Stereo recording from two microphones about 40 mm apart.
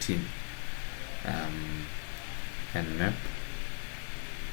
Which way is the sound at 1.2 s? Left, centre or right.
Centre.